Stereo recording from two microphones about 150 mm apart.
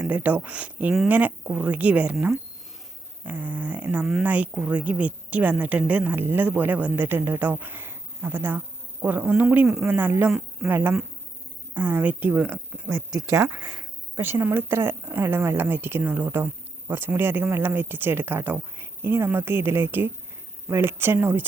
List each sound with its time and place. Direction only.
0.0 s speech: 10° right (ahead or behind)